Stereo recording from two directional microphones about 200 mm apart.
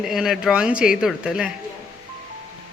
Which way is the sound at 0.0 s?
Centre (ahead or behind).